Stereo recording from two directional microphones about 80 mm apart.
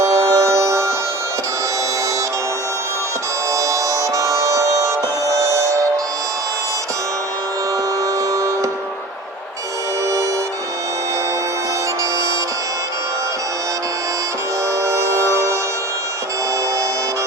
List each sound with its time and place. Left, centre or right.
0.0 s music: right
3.5 s music: right
8.3 s music: right
14.8 s music: right